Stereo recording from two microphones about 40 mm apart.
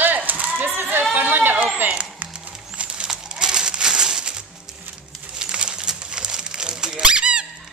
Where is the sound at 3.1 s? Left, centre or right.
Centre.